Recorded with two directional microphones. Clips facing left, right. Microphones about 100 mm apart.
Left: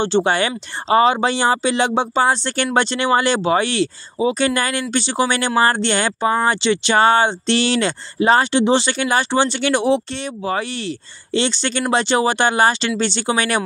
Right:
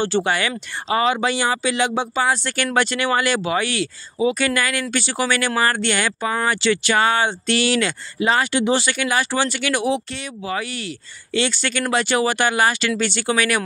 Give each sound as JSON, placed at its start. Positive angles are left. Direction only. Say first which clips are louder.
{"t": 0.0, "sound": "speech", "louder": "left 3 dB", "side_deg": 25}